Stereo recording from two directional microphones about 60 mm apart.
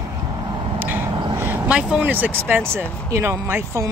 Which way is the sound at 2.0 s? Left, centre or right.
Right.